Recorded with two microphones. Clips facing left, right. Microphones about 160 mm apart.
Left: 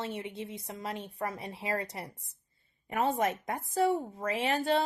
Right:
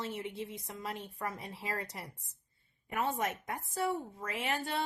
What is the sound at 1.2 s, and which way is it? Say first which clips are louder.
Speech: left 4 dB; 25° left (ahead or behind).